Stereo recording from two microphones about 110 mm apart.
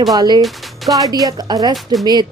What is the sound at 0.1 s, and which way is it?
Speech, 40° right (ahead or behind).